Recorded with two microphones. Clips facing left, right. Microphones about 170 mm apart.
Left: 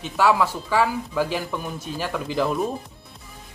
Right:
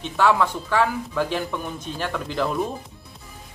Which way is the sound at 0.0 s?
5° left (ahead or behind).